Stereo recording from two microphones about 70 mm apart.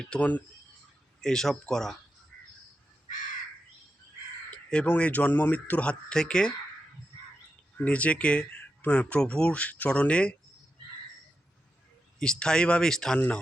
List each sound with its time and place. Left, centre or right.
0.2 s speech: left
1.2 s speech: centre
4.5 s crow: centre
4.9 s speech: left
7.8 s speech: left
12.2 s speech: centre